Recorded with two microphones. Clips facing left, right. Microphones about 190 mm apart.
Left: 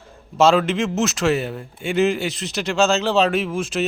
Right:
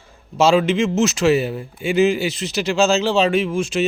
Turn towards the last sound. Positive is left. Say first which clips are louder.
# right 3 dB
turn(degrees=0)  # may be behind; listen again after turning